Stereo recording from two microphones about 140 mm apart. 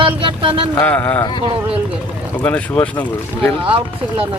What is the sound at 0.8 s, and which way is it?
Speech, 10° left (ahead or behind).